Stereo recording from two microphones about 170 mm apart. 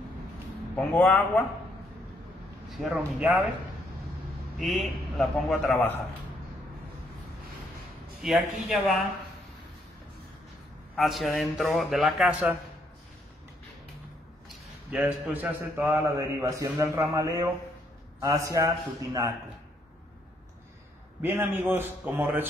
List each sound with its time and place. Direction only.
0.7 s a man's voice: 10° left (ahead or behind)
2.7 s speech: 5° right (ahead or behind)
4.6 s speech: centre (ahead or behind)
8.2 s speech: centre (ahead or behind)
11.0 s speech: centre (ahead or behind)
14.9 s a man's voice: 5° right (ahead or behind); by 19.3 s 20° right (ahead or behind)
21.2 s a man's voice: 10° right (ahead or behind)